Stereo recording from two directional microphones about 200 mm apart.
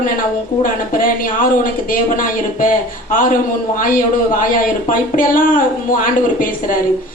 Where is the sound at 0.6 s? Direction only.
45° left (ahead or behind).